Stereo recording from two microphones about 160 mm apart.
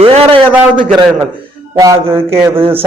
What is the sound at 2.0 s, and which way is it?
Speech, 35° right (ahead or behind).